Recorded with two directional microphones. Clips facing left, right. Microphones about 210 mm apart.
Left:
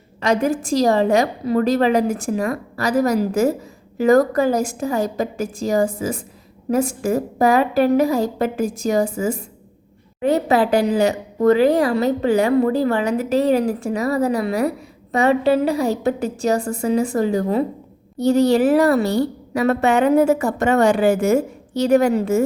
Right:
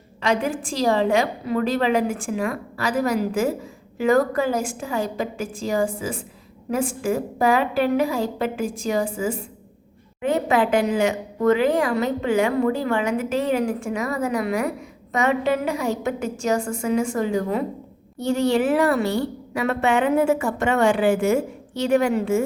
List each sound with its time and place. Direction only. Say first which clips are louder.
0.2 s a woman's voice: left 4 dB; 40° left (ahead or behind)